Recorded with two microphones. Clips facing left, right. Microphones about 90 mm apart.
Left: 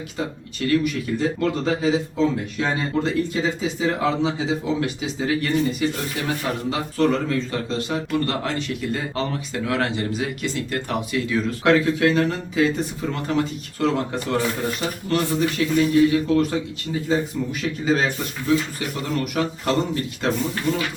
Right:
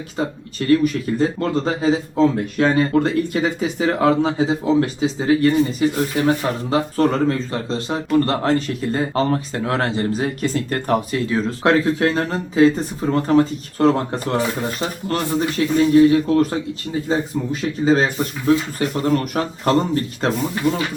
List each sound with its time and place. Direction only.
0.2 s speech: 35° right (ahead or behind)